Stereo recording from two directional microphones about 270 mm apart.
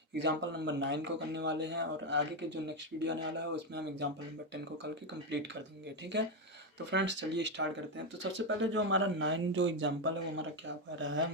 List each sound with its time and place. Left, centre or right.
0.2 s speech: right
6.9 s speech: right